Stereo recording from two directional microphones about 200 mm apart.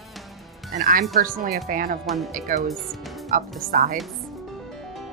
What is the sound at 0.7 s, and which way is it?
Speech, 45° right (ahead or behind).